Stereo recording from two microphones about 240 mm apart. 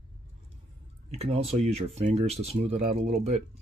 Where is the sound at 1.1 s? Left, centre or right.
Right.